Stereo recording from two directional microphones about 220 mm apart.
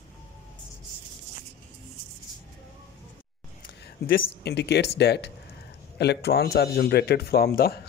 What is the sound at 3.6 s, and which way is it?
Speech, 50° left (ahead or behind).